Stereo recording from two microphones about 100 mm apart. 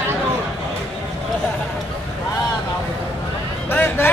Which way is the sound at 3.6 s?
20° left (ahead or behind).